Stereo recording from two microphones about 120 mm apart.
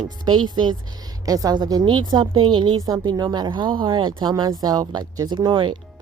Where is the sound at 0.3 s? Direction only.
40° right (ahead or behind).